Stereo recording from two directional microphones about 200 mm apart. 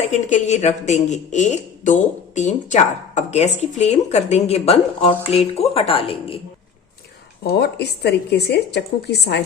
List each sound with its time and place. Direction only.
0.1 s speech: 35° left (ahead or behind)
7.5 s a woman's voice: 55° left (ahead or behind)